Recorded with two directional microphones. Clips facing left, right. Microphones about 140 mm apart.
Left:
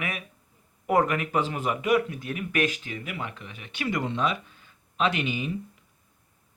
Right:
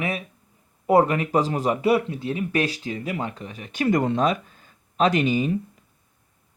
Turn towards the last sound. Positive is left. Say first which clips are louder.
# right 7 dB
turn(degrees=-40)  # may be behind; listen again after turning